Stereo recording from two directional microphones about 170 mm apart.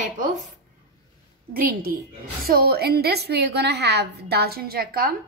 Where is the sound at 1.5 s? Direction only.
55° right (ahead or behind).